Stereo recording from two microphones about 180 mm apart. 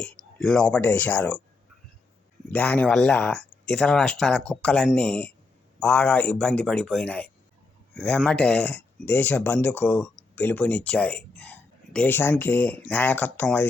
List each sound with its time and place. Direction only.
0.0 s speech: 5° left (ahead or behind)
2.5 s speech: 10° left (ahead or behind)